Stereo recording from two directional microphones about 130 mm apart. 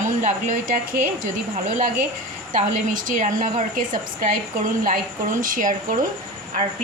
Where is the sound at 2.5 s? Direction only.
90° right.